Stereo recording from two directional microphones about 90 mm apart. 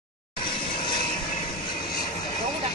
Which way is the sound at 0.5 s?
70° left (ahead or behind).